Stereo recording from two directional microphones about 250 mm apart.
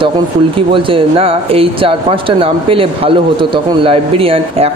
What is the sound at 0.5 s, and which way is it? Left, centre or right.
Speech, right.